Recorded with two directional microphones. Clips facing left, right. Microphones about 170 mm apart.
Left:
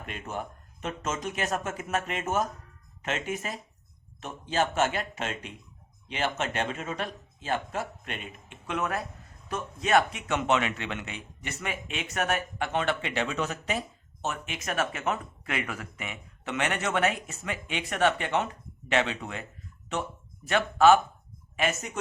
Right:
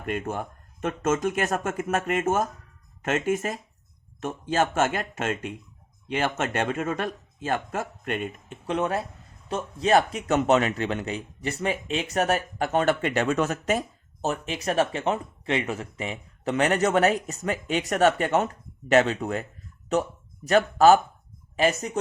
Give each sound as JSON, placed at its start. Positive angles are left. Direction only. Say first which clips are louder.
{"t": 0.0, "sound": "a man's voice", "louder": "right 6 dB", "side_deg": -50}